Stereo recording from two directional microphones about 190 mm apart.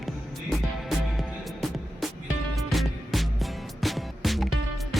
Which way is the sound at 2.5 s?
Centre (ahead or behind).